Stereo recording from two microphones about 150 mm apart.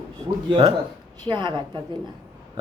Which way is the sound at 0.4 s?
35° right (ahead or behind).